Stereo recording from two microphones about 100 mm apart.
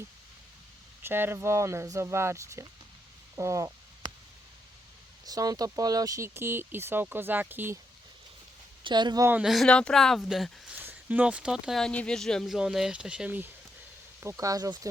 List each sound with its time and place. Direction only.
1.0 s speech: 20° right (ahead or behind)
5.2 s speech: 40° right (ahead or behind); by 7.8 s 20° right (ahead or behind)
8.8 s speech: 50° right (ahead or behind)
9.4 s speech: centre (ahead or behind)
9.6 s speech: 10° left (ahead or behind)
10.8 s speech: 15° right (ahead or behind)
11.8 s speech: 10° left (ahead or behind); by 13.5 s 15° right (ahead or behind)
14.3 s speech: 35° right (ahead or behind)